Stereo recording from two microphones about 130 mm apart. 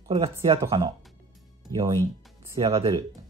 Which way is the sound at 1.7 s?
30° right (ahead or behind).